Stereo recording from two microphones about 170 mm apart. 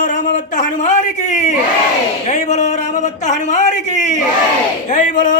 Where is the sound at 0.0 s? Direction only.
50° left (ahead or behind).